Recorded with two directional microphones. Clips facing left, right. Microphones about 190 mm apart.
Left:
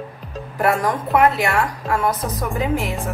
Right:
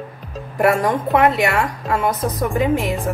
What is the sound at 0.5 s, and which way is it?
A woman's voice, 25° right (ahead or behind).